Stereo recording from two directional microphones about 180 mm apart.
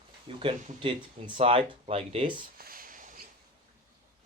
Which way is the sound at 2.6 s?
50° right (ahead or behind).